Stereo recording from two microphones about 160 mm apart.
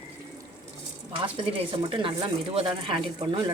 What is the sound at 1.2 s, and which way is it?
Speech, 30° right (ahead or behind).